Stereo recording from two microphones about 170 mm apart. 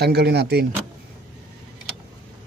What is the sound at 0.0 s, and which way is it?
Speech, 75° right (ahead or behind).